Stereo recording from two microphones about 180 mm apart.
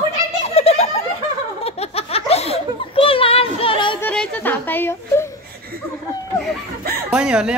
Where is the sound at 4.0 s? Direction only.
5° left (ahead or behind).